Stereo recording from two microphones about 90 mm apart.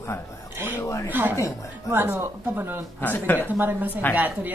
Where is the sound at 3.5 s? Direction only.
20° right (ahead or behind).